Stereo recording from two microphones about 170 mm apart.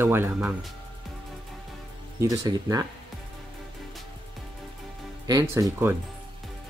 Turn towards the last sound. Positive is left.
turn(degrees=-15)  # may be behind; listen again after turning